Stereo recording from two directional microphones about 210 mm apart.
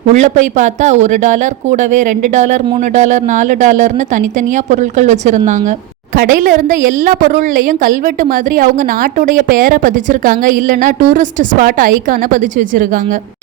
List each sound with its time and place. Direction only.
0.1 s a woman's voice: 35° right (ahead or behind)